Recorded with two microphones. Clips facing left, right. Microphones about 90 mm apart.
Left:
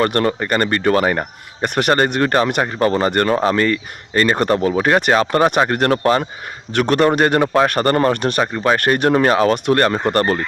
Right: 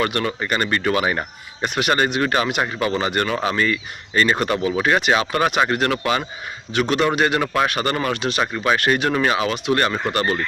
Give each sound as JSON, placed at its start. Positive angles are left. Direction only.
{"t": 0.0, "sound": "speech", "side_deg": 45}
{"t": 6.7, "sound": "speech", "side_deg": 50}
{"t": 7.4, "sound": "speech", "side_deg": 30}
{"t": 7.7, "sound": "speech", "side_deg": 45}
{"t": 8.4, "sound": "speech", "side_deg": 35}